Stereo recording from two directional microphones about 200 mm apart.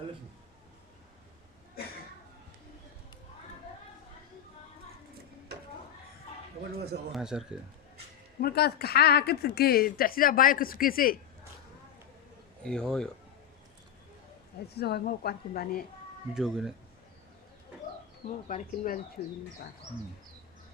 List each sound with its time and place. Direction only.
6.7 s a sound: 55° right (ahead or behind)
7.1 s a man's voice: 5° right (ahead or behind)
8.4 s a woman's voice: 50° left (ahead or behind)
12.6 s a man's voice: 5° left (ahead or behind)
14.7 s a woman's voice: 55° left (ahead or behind)
16.3 s a man's voice: centre (ahead or behind)
18.3 s speech: 40° left (ahead or behind)